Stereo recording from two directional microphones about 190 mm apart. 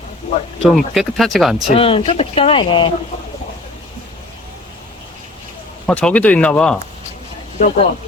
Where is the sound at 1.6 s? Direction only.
30° left (ahead or behind).